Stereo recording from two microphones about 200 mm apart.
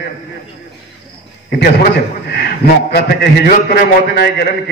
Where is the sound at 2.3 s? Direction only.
55° left (ahead or behind).